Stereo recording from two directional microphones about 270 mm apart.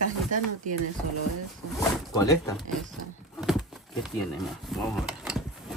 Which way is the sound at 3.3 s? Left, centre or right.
Centre.